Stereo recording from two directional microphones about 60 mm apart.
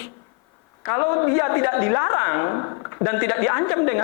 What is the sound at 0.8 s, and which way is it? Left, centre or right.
A woman's voice, left.